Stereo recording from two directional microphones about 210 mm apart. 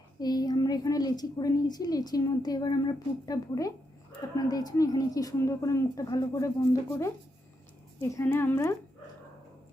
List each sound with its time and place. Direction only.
0.2 s a child's voice: 20° left (ahead or behind)
8.1 s a child's voice: 10° left (ahead or behind)